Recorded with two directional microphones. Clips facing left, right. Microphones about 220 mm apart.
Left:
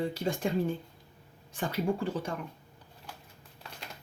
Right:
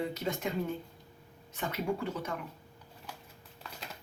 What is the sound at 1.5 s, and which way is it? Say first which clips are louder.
Speech: left 3 dB; 30° left (ahead or behind).